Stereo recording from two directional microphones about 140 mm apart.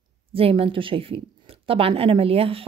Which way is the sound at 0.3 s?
40° right (ahead or behind).